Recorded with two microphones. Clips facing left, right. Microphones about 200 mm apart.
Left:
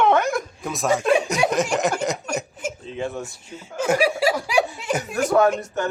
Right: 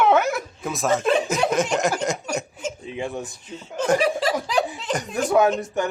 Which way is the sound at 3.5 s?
10° left (ahead or behind).